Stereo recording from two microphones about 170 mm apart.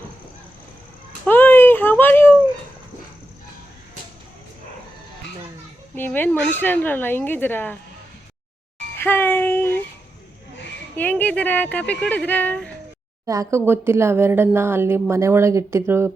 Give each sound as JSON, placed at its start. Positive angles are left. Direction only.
{"t": 1.3, "sound": "a sound", "side_deg": 10}
{"t": 5.9, "sound": "speech", "side_deg": 10}
{"t": 9.0, "sound": "music", "side_deg": 10}
{"t": 10.9, "sound": "speech", "side_deg": 10}
{"t": 13.2, "sound": "speech", "side_deg": -20}